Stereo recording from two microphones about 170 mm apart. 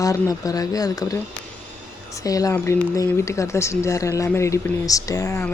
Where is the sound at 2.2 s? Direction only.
20° left (ahead or behind).